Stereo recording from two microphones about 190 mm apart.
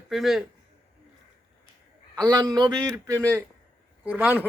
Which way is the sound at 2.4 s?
20° right (ahead or behind).